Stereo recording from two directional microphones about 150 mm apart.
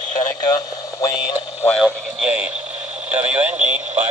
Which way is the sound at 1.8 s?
5° right (ahead or behind).